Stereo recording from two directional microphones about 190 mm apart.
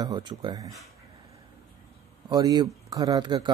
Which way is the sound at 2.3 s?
20° right (ahead or behind).